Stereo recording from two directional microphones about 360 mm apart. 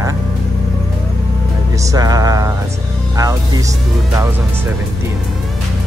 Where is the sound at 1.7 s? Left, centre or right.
Centre.